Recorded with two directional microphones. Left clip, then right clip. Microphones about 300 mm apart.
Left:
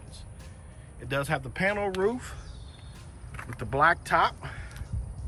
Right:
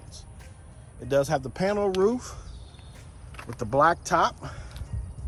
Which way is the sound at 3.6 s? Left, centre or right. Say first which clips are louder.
Right 2 dB; centre.